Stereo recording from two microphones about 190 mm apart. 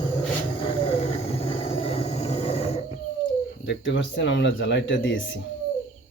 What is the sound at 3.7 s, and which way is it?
Speech, 75° left (ahead or behind).